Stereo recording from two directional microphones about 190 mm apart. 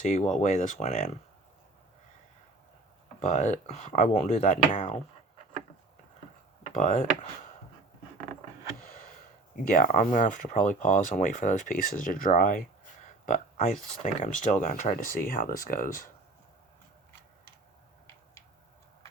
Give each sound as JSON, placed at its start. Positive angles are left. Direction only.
{"t": 0.0, "sound": "speech", "side_deg": 40}
{"t": 3.2, "sound": "speech", "side_deg": 40}
{"t": 6.7, "sound": "speech", "side_deg": 40}
{"t": 9.6, "sound": "speech", "side_deg": 45}